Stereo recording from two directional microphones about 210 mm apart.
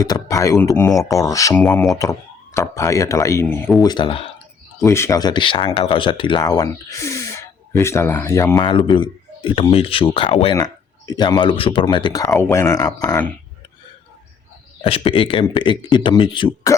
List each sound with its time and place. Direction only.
0.0 s speech: 15° left (ahead or behind)
3.8 s speech: 20° left (ahead or behind)
4.8 s speech: 15° left (ahead or behind)
8.6 s speech: 25° left (ahead or behind)
14.8 s speech: 25° left (ahead or behind)